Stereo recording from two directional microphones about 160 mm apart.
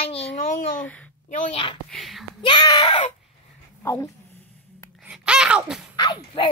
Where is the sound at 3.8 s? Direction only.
15° left (ahead or behind).